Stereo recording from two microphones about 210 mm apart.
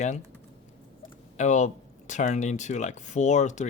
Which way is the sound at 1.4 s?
35° left (ahead or behind).